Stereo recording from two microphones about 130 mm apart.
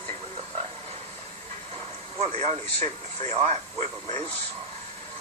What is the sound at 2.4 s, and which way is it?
Speech, 55° right (ahead or behind).